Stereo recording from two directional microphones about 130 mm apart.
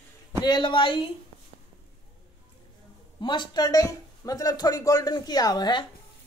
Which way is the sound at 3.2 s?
35° left (ahead or behind).